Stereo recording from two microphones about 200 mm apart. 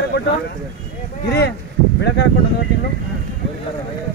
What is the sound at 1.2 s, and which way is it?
Speech, 50° left (ahead or behind).